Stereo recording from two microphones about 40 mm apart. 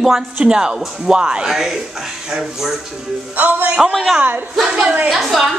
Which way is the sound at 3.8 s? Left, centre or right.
Centre.